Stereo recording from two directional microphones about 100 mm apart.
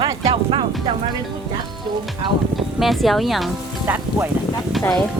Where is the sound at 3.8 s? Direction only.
20° right (ahead or behind).